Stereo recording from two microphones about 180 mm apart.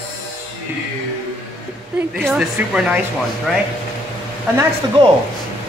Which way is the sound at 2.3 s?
Centre (ahead or behind).